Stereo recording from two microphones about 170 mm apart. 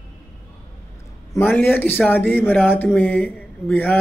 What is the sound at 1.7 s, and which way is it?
Speech, 10° left (ahead or behind).